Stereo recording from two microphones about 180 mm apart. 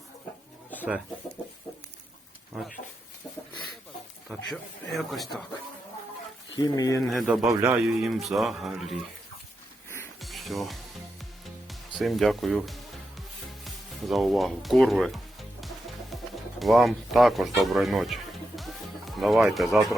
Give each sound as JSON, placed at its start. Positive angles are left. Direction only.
{"t": 4.5, "sound": "speech", "side_deg": 0}
{"t": 6.6, "sound": "speech", "side_deg": 20}
{"t": 7.1, "sound": "speech", "side_deg": 0}
{"t": 7.5, "sound": "speech", "side_deg": -15}
{"t": 7.9, "sound": "speech", "side_deg": 0}
{"t": 10.2, "sound": "music", "side_deg": 0}